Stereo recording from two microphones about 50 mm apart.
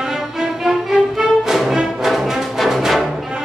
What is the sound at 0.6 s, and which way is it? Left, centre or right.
Music, centre.